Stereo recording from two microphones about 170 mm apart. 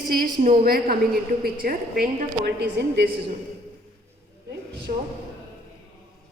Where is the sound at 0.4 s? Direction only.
60° right (ahead or behind).